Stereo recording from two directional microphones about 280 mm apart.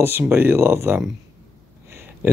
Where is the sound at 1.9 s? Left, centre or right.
Centre.